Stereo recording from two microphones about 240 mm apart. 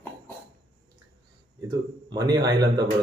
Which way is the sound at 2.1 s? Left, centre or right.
Centre.